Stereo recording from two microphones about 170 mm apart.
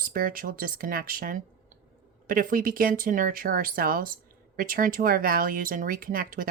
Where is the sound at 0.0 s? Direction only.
55° right (ahead or behind).